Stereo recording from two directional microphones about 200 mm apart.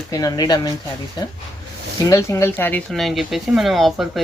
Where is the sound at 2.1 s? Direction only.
15° left (ahead or behind).